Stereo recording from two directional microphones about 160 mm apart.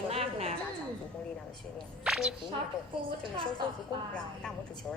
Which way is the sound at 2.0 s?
5° right (ahead or behind).